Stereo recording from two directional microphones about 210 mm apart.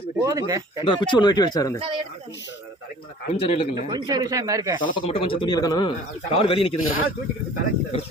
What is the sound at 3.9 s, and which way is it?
Speech, 20° right (ahead or behind).